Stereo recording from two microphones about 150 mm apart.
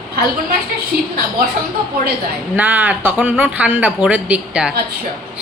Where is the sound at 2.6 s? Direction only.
10° right (ahead or behind).